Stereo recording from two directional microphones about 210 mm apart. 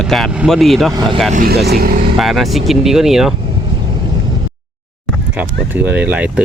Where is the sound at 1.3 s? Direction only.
50° right (ahead or behind).